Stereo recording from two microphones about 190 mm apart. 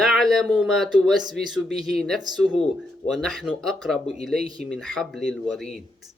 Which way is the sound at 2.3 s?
20° right (ahead or behind).